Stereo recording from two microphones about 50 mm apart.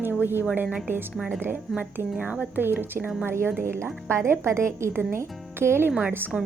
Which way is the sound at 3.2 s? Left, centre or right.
Right.